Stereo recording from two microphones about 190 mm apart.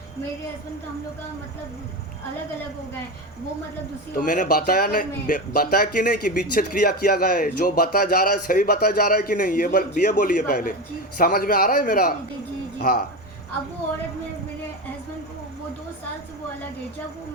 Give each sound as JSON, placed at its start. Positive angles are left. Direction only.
{"t": 4.2, "sound": "speech", "side_deg": 45}